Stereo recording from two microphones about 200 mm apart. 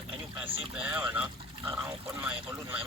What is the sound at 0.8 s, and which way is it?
Speech, 10° right (ahead or behind).